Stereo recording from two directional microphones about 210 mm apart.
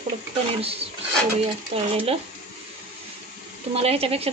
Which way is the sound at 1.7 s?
30° right (ahead or behind).